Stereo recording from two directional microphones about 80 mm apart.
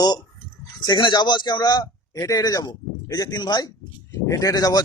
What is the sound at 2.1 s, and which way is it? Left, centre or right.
Speech, left.